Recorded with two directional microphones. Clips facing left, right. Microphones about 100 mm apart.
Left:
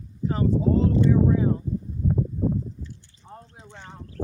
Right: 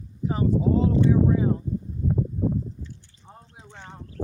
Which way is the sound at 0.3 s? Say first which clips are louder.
Even; 10° right (ahead or behind).